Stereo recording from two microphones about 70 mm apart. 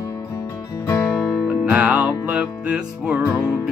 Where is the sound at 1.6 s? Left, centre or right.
Centre.